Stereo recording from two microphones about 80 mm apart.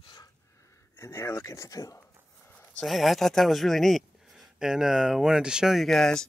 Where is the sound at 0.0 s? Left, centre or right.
Left.